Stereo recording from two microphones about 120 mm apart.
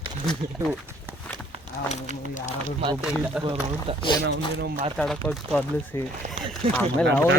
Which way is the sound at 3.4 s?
45° right (ahead or behind).